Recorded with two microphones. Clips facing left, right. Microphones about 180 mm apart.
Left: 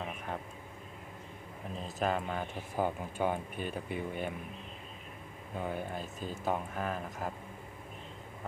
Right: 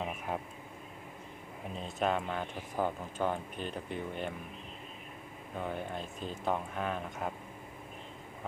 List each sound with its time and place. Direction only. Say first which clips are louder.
1.7 s speech: right 1 dB; centre (ahead or behind)
5.5 s speech: left 1 dB; 5° left (ahead or behind)